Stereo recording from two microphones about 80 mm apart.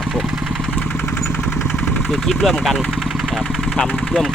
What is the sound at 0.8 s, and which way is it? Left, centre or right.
Vehicle, centre.